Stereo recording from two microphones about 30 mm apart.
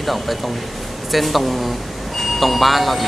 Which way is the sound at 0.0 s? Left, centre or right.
Centre.